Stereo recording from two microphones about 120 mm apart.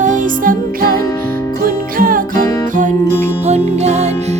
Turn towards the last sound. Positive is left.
turn(degrees=-65)  # may be behind; listen again after turning